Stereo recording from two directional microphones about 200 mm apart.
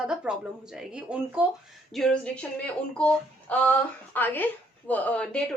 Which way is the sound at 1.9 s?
5° left (ahead or behind).